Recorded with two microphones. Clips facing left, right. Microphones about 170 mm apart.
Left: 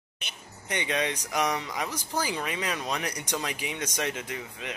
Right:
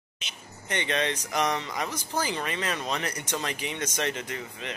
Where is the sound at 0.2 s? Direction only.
55° left (ahead or behind).